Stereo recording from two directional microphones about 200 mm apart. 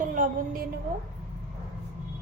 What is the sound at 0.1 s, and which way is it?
Speech, 40° right (ahead or behind).